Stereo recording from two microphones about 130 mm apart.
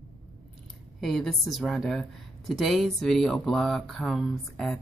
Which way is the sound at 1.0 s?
Centre (ahead or behind).